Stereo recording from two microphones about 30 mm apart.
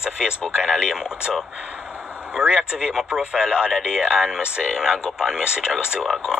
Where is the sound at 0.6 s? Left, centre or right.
Centre.